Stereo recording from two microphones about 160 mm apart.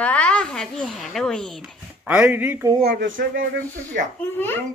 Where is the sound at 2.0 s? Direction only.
10° right (ahead or behind).